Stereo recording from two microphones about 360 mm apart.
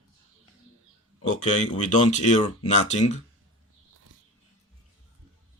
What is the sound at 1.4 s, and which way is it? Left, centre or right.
Speech, centre.